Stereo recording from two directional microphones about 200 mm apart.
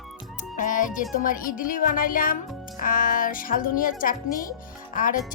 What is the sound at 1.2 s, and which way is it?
A child's voice, 45° left (ahead or behind).